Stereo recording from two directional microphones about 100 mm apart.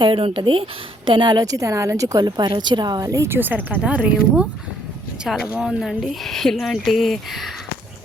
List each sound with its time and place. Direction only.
0.0 s speech: 60° right (ahead or behind); by 3.2 s 35° right (ahead or behind)
3.2 s speech: 20° right (ahead or behind)
5.5 s speech: 5° right (ahead or behind)